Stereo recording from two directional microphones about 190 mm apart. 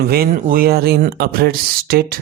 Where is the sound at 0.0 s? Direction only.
55° right (ahead or behind).